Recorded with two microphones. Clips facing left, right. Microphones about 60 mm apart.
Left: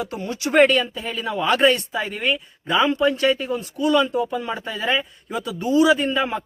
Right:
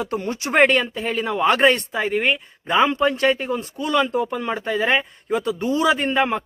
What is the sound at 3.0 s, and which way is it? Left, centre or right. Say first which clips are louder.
Speech: even; right.